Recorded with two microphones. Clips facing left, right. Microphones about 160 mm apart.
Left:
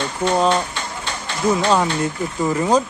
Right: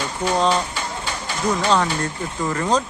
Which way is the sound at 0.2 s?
Centre (ahead or behind).